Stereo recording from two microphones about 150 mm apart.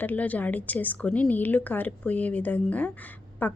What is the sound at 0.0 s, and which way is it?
A woman's voice, 10° left (ahead or behind).